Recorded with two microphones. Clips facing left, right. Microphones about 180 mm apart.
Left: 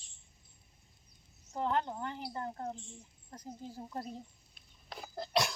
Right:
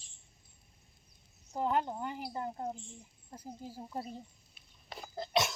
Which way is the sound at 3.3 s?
10° right (ahead or behind).